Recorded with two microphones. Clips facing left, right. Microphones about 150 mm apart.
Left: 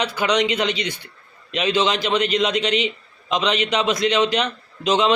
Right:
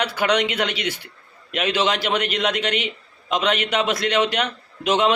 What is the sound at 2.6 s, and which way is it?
Speech, 55° right (ahead or behind).